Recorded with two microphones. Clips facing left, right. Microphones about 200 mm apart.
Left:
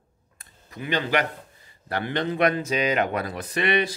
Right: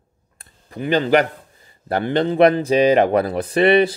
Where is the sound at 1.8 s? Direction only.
30° right (ahead or behind).